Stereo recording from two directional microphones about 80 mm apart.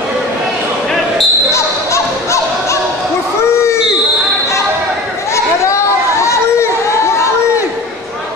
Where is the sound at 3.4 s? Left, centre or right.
Left.